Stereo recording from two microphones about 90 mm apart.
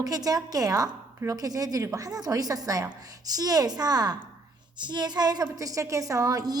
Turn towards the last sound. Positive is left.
turn(degrees=-45)  # may be behind; listen again after turning